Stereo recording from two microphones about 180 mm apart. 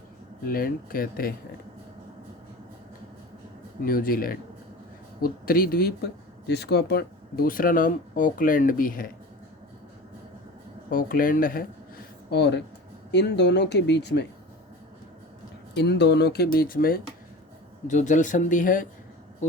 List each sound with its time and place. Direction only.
0.4 s speech: 55° left (ahead or behind)
3.8 s speech: 55° left (ahead or behind)
6.5 s speech: 65° left (ahead or behind); by 9.0 s 50° left (ahead or behind)
10.8 s speech: 50° left (ahead or behind)
12.3 s speech: 70° left (ahead or behind)
15.7 s speech: 70° left (ahead or behind); by 17.0 s 55° left (ahead or behind)
17.8 s speech: 45° left (ahead or behind)